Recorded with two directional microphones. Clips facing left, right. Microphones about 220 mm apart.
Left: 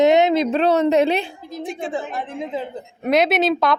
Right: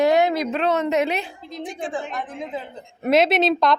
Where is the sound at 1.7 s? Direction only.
25° left (ahead or behind).